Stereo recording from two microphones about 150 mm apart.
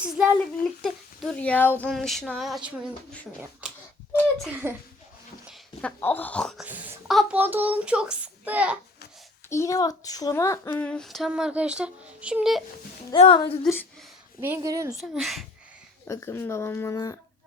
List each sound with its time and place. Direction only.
0.0 s a child's voice: 10° right (ahead or behind)
0.8 s speech: centre (ahead or behind)
1.9 s speech: centre (ahead or behind)
4.6 s a child's voice: 15° right (ahead or behind)
5.8 s speech: 10° left (ahead or behind)
6.7 s a child's voice: 10° right (ahead or behind)
7.1 s speech: centre (ahead or behind)
7.3 s a child's voice: 10° right (ahead or behind)
9.5 s speech: 20° left (ahead or behind); by 12.6 s centre (ahead or behind)
13.1 s a woman's voice: 35° left (ahead or behind)
14.4 s a woman's voice: 20° right (ahead or behind)
15.1 s speech: centre (ahead or behind)
16.0 s speech: 20° left (ahead or behind)